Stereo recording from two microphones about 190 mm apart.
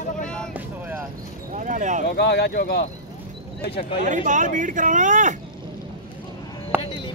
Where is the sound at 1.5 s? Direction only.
40° right (ahead or behind).